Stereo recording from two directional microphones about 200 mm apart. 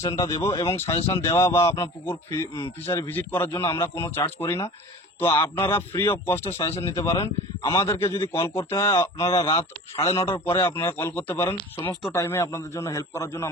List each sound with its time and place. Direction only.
0.0 s speech: 15° left (ahead or behind)
10.2 s speech: 10° left (ahead or behind)
11.5 s speech: 20° left (ahead or behind)